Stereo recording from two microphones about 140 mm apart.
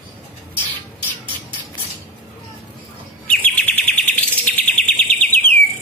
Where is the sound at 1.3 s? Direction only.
40° right (ahead or behind).